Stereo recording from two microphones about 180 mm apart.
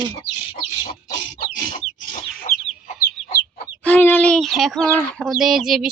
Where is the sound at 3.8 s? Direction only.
10° left (ahead or behind).